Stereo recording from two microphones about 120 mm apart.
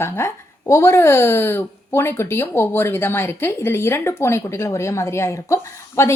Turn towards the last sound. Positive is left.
turn(degrees=25)  # may be behind; listen again after turning